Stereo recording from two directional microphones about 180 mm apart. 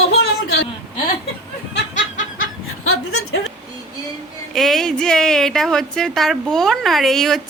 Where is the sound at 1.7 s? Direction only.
75° left (ahead or behind).